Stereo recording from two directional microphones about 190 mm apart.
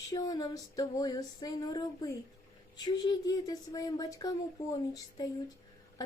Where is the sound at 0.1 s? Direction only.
20° left (ahead or behind).